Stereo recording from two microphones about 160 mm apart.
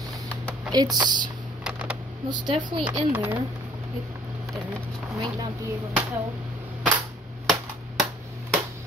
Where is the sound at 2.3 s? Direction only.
25° right (ahead or behind).